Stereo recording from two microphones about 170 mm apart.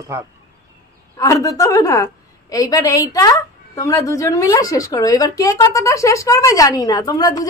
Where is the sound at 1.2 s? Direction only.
20° left (ahead or behind).